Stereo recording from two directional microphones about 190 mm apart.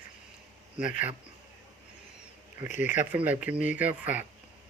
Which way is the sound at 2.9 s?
10° right (ahead or behind).